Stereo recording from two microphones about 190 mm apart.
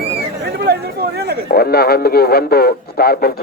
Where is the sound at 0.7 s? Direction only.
60° right (ahead or behind).